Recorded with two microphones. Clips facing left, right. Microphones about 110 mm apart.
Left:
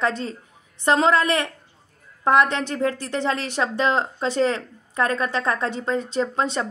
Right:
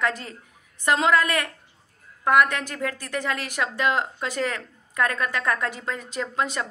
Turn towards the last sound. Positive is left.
turn(degrees=30)  # may be behind; listen again after turning